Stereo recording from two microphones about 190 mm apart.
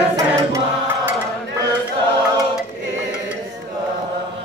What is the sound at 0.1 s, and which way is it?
Chant, 15° right (ahead or behind).